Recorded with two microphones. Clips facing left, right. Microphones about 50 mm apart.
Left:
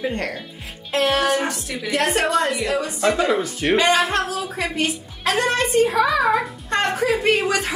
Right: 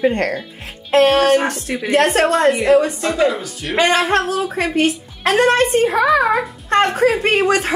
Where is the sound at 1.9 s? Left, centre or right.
Right.